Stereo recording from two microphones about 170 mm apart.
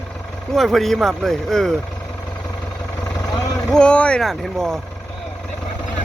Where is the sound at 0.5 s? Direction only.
Centre (ahead or behind).